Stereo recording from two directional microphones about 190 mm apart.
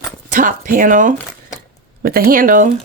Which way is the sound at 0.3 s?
45° right (ahead or behind).